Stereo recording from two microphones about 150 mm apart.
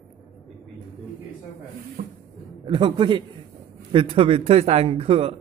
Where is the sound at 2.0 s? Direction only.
55° right (ahead or behind).